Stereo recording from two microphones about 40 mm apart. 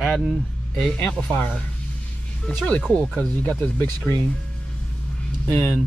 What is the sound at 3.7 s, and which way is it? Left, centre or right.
Speech, left.